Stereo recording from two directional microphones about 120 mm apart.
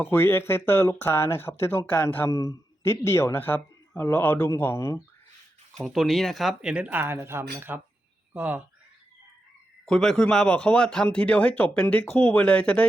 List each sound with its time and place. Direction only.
0.0 s speech: 20° left (ahead or behind)
2.3 s speech: 30° left (ahead or behind)
5.7 s speech: centre (ahead or behind)
9.8 s speech: 5° left (ahead or behind)